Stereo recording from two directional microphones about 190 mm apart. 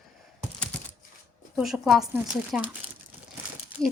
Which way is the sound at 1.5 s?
Centre (ahead or behind).